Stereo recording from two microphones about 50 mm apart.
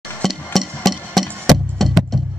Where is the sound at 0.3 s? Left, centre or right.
Centre.